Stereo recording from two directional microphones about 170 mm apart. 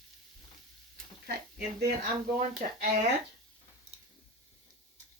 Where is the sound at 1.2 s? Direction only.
65° right (ahead or behind).